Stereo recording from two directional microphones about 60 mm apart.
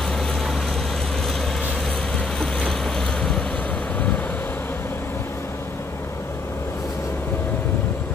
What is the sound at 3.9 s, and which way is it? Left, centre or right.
Vehicle, left.